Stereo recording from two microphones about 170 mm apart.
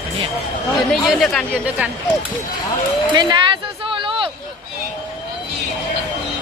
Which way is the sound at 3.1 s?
25° right (ahead or behind).